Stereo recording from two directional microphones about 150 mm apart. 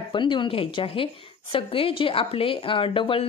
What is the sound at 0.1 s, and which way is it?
A woman's voice, 30° left (ahead or behind).